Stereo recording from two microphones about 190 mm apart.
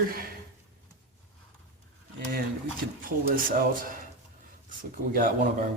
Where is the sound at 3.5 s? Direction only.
45° right (ahead or behind).